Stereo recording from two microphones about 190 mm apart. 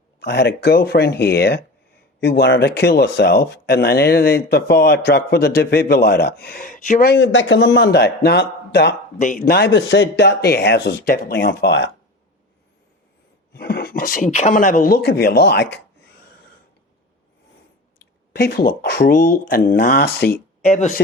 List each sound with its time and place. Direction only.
0.2 s speech: 60° left (ahead or behind); by 7.1 s 45° left (ahead or behind)
7.1 s speech: 65° left (ahead or behind)
9.2 s speech: 45° left (ahead or behind); by 11.9 s 65° left (ahead or behind)
13.5 s speech: 55° left (ahead or behind)
18.0 s speech: 60° left (ahead or behind)
20.7 s speech: 35° left (ahead or behind)